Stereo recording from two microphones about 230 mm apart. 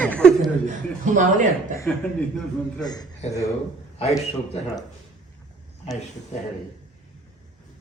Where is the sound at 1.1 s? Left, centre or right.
Right.